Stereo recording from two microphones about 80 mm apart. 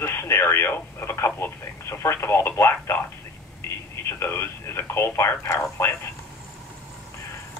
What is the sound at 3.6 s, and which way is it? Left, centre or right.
Telephone, left.